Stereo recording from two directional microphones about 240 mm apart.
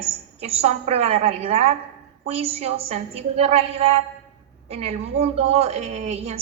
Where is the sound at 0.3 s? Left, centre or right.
Right.